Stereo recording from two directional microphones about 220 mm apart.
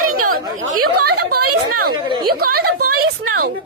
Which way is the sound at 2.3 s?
45° right (ahead or behind).